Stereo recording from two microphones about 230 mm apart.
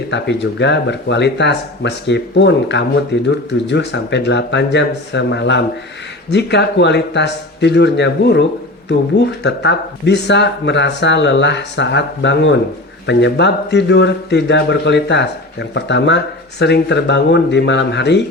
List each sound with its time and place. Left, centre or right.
0.1 s speech: left